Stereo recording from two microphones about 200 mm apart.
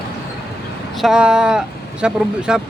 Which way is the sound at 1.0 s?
5° right (ahead or behind).